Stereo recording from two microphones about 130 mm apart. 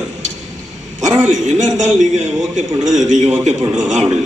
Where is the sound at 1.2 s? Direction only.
70° right (ahead or behind).